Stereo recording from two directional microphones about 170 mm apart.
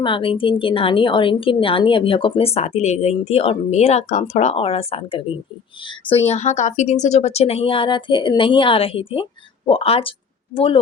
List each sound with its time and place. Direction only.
0.0 s a woman's voice: 30° left (ahead or behind)
6.2 s a woman's voice: 40° left (ahead or behind)